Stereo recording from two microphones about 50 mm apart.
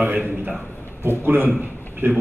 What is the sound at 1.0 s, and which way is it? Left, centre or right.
A man's voice, right.